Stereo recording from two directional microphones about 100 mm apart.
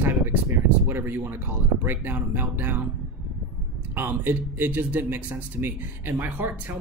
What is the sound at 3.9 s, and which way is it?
Speech, 20° right (ahead or behind).